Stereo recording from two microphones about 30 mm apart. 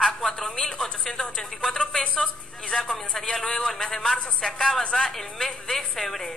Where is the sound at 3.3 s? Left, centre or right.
Centre.